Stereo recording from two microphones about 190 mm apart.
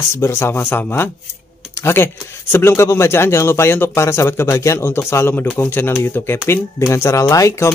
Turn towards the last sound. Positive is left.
turn(degrees=15)  # may be behind; listen again after turning